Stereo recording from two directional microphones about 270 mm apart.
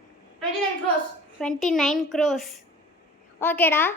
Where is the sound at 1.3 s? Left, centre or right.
Centre.